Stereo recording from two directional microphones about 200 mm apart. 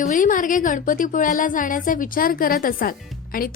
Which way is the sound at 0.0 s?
40° left (ahead or behind).